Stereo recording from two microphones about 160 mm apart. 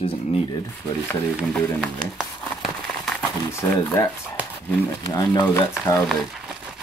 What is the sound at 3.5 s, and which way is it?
Speech, 15° left (ahead or behind).